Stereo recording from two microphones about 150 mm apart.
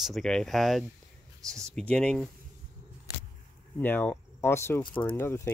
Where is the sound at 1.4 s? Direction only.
20° right (ahead or behind).